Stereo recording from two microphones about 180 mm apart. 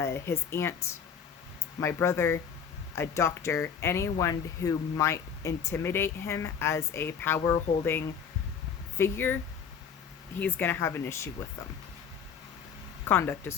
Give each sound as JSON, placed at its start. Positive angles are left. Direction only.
{"t": 0.0, "sound": "speech", "side_deg": 15}
{"t": 1.8, "sound": "speech", "side_deg": 15}
{"t": 10.4, "sound": "speech", "side_deg": 10}
{"t": 13.1, "sound": "speech", "side_deg": 10}